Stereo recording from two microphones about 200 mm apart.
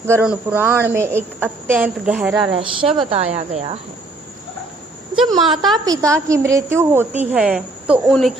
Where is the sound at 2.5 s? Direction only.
25° right (ahead or behind).